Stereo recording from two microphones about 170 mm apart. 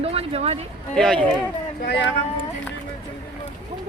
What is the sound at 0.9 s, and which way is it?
Speech, 5° left (ahead or behind).